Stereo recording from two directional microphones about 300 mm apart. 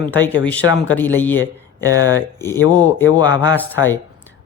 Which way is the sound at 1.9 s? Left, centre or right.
Centre.